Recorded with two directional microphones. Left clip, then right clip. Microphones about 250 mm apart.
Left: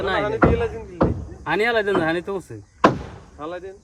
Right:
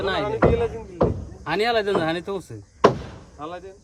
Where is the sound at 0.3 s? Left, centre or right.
Right.